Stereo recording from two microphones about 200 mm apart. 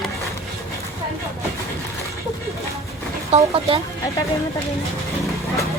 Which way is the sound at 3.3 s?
30° right (ahead or behind).